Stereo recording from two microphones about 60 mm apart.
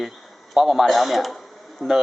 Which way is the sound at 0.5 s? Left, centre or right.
Centre.